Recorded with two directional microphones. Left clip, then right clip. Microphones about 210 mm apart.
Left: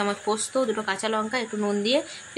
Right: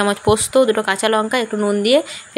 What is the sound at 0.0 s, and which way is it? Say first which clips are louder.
Speech: right 10 dB; 30° right (ahead or behind).